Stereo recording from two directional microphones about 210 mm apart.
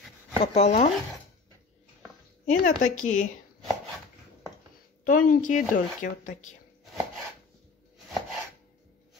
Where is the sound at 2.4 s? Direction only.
40° left (ahead or behind).